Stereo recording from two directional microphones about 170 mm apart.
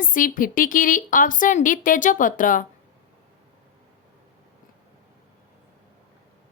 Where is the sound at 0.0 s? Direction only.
55° left (ahead or behind).